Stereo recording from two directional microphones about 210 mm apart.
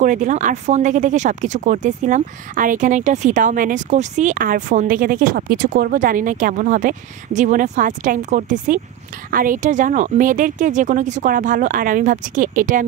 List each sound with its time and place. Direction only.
0.0 s speech: 40° right (ahead or behind)